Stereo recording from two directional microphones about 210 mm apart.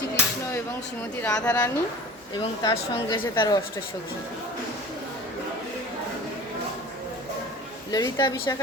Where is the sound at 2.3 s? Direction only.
20° left (ahead or behind).